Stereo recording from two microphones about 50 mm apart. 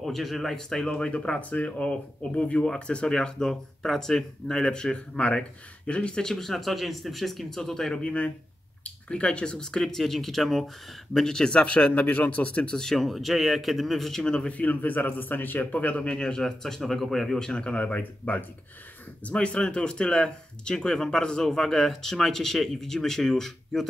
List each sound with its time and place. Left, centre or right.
0.0 s speech: centre
0.9 s a man's voice: left
6.1 s a man's voice: centre; by 12.7 s left
12.7 s a man's voice: centre
14.2 s speech: centre
14.5 s a man's voice: left; by 17.6 s centre
17.6 s speech: left; by 23.9 s centre